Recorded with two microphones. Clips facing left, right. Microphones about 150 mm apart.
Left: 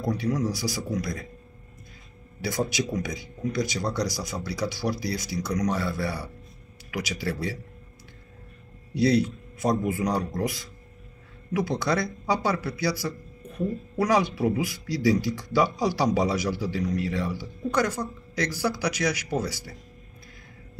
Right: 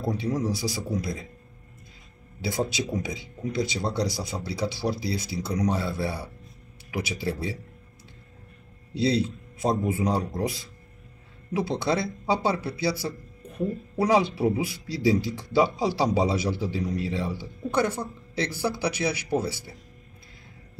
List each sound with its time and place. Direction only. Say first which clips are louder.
0.0 s speech: left 1 dB; 25° right (ahead or behind)
2.4 s speech: even; 25° right (ahead or behind)
8.9 s speech: left 2 dB; 25° right (ahead or behind)